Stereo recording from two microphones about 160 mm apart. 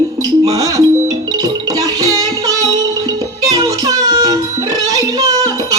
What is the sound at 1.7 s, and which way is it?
Music, 20° right (ahead or behind).